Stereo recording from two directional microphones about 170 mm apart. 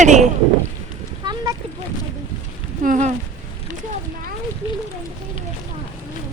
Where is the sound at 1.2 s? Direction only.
20° right (ahead or behind).